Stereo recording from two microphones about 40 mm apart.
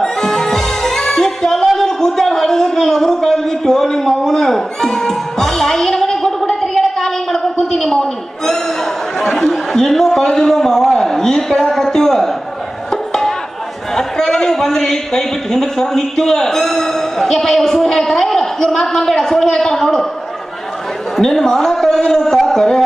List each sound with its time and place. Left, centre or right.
0.0 s music: centre
1.9 s a sound: centre
13.9 s a man's voice: centre
21.2 s a man's voice: centre